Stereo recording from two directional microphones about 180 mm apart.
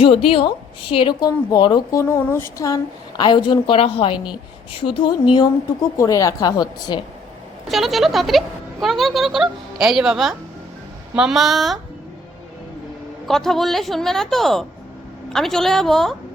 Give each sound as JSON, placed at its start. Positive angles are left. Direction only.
{"t": 0.0, "sound": "speech", "side_deg": 30}
{"t": 6.0, "sound": "speech", "side_deg": 20}
{"t": 7.7, "sound": "speech", "side_deg": 0}
{"t": 13.2, "sound": "speech", "side_deg": 0}